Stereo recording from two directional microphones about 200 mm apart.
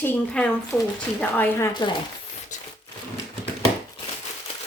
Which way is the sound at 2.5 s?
40° left (ahead or behind).